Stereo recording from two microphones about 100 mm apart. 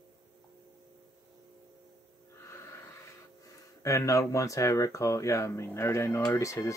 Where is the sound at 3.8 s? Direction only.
30° left (ahead or behind).